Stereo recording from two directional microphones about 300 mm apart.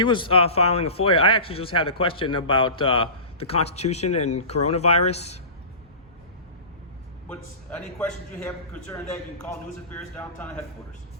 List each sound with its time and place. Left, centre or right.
0.0 s a man's voice: centre
7.3 s speech: centre
9.9 s a man's voice: centre